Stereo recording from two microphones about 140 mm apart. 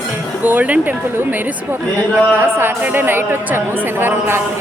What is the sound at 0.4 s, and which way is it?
A man's voice, 10° right (ahead or behind).